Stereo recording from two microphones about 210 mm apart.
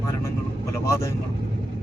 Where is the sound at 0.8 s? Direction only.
15° left (ahead or behind).